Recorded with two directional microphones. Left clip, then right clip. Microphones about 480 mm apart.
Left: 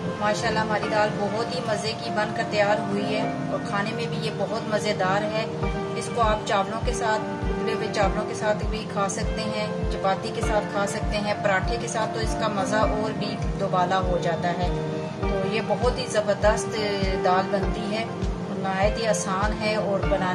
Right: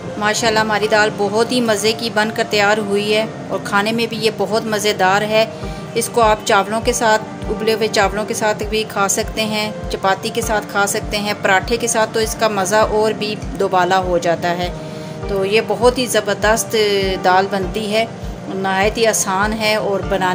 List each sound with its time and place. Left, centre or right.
0.2 s a woman's voice: left
18.6 s a woman's voice: left